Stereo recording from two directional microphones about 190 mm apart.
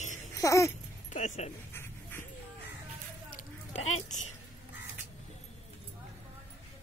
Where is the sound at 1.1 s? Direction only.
40° left (ahead or behind).